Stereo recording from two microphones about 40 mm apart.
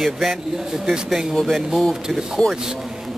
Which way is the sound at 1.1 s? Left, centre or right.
Centre.